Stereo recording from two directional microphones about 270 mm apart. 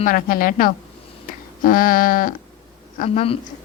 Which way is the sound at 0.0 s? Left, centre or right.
Left.